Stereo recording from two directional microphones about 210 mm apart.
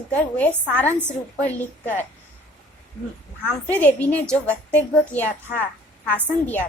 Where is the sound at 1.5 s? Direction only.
10° left (ahead or behind).